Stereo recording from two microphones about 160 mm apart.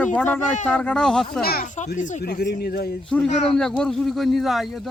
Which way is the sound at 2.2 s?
80° left.